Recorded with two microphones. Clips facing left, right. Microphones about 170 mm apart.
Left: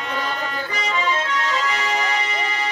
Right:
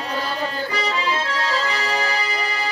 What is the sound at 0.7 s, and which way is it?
Accordion, 35° right (ahead or behind).